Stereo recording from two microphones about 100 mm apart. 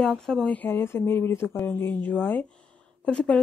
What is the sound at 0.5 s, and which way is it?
Speech, 20° left (ahead or behind).